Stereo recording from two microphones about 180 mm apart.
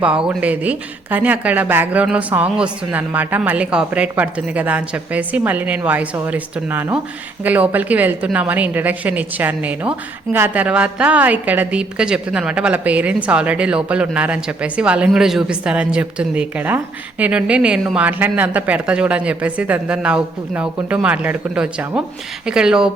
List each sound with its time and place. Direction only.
0.0 s a woman's voice: 5° right (ahead or behind)